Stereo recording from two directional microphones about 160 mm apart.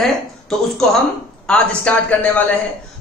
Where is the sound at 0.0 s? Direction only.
Centre (ahead or behind).